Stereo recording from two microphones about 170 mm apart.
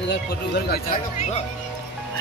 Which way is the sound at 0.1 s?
70° left (ahead or behind).